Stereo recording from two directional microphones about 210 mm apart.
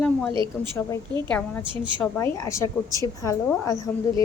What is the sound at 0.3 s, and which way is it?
Speech, 25° right (ahead or behind).